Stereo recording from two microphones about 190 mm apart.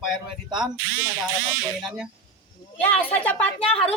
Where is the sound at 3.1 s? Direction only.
10° left (ahead or behind).